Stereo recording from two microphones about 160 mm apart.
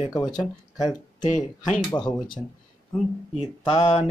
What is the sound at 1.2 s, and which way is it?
Speech, 50° left (ahead or behind).